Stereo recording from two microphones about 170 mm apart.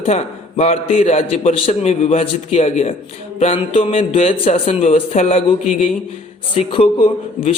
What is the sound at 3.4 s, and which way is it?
A man's voice, 30° left (ahead or behind).